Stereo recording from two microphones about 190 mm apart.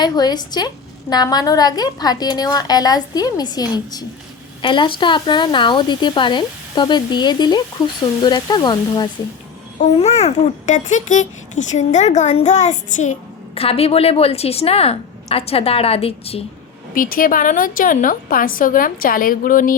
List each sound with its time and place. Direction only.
0.0 s speech: 20° left (ahead or behind)
9.7 s a child's voice: 35° left (ahead or behind)
16.9 s a woman's voice: 45° left (ahead or behind)